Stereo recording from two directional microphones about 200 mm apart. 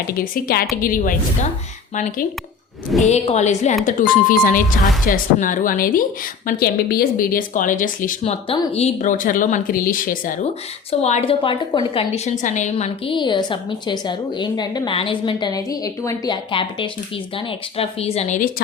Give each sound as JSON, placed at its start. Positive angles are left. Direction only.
{"t": 0.1, "sound": "speech", "side_deg": 45}
{"t": 11.0, "sound": "a woman's voice", "side_deg": 30}